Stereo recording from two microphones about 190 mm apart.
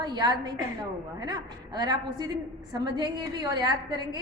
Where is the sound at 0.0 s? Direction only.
20° right (ahead or behind).